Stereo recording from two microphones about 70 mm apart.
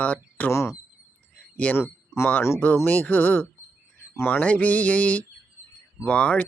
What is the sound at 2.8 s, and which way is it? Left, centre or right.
Mantra, left.